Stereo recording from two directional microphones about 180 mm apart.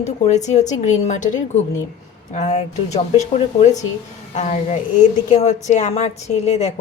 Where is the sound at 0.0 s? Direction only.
40° left (ahead or behind).